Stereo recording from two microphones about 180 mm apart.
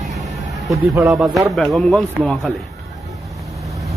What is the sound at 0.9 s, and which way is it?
Speech, 10° right (ahead or behind).